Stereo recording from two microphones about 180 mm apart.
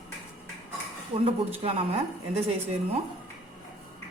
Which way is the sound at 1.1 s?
30° right (ahead or behind).